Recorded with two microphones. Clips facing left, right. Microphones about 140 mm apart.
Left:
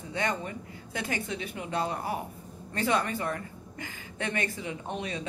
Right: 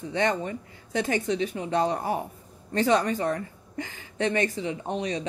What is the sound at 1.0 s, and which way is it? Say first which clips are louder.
Speech: right 7 dB; 40° right (ahead or behind).